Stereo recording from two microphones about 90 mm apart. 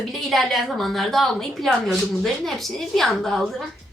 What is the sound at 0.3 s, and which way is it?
A woman's voice, centre (ahead or behind).